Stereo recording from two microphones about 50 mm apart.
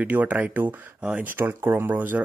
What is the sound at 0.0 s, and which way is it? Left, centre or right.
Speech, right.